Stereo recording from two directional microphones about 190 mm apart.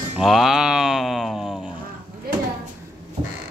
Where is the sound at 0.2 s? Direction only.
Centre (ahead or behind).